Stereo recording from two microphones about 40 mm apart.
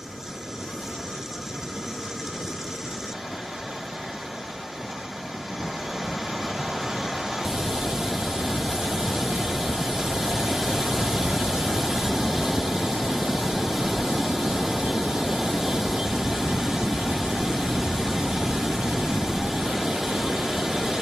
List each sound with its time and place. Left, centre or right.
6.0 s vehicle: centre